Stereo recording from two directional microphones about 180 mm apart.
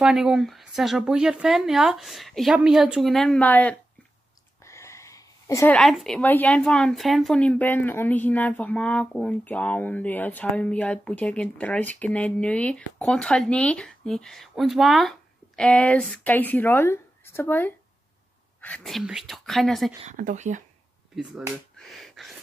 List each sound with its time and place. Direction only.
0.0 s speech: 5° right (ahead or behind)
4.6 s a sound: 15° left (ahead or behind)
5.8 s speech: centre (ahead or behind)
20.1 s speech: 45° right (ahead or behind)
21.2 s speech: 5° right (ahead or behind)